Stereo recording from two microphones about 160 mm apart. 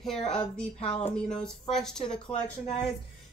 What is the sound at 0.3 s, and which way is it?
Speech, 5° left (ahead or behind).